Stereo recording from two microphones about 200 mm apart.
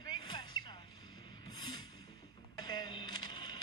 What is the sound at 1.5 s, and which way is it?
Music, 20° left (ahead or behind).